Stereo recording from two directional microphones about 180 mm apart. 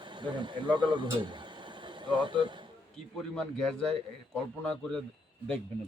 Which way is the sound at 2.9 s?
5° left (ahead or behind).